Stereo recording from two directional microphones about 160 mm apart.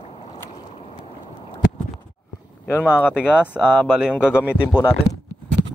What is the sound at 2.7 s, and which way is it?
Speech, 10° left (ahead or behind).